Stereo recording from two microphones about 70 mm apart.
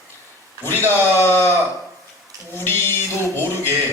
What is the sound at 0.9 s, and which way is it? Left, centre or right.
Speech, left.